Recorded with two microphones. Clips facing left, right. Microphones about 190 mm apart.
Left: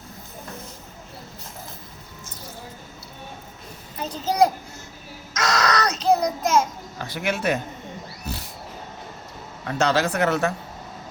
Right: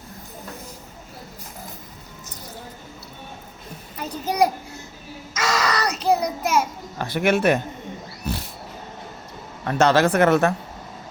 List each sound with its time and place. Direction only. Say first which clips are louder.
4.1 s a child's voice: left 1 dB; 10° right (ahead or behind)
5.3 s a sound: left 1 dB; 5° right (ahead or behind)
6.0 s child singing: even; 10° right (ahead or behind)
7.0 s speech: right 6 dB; 60° right (ahead or behind)
9.6 s speech: right 4 dB; 55° right (ahead or behind)